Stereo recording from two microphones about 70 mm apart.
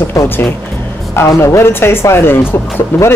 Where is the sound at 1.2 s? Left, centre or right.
Left.